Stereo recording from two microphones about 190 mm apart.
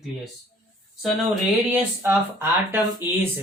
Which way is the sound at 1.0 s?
Centre (ahead or behind).